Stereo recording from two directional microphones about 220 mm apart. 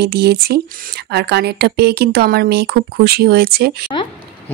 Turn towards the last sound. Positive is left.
turn(degrees=-45)  # may be behind; listen again after turning